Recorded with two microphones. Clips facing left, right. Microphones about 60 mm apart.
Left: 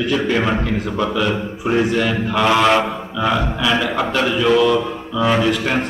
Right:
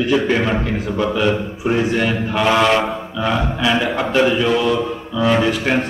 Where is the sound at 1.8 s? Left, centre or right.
Centre.